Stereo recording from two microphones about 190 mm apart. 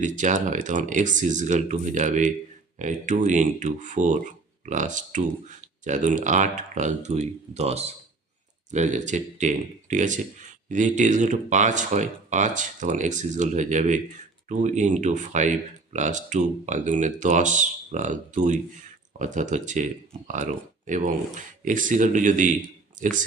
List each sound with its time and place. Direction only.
0.0 s speech: 40° right (ahead or behind)